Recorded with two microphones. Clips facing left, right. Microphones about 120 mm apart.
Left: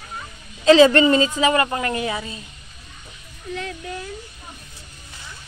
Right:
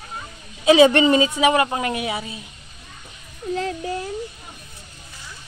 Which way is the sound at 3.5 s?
30° right (ahead or behind).